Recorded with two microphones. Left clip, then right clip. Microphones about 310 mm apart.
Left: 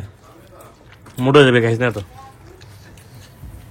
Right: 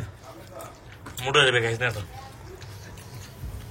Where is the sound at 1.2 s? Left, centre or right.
Centre.